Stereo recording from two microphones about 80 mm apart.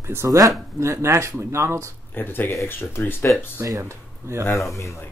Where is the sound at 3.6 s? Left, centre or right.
Right.